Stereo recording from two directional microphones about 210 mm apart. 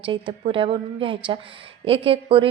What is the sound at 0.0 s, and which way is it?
A woman's voice, 25° right (ahead or behind).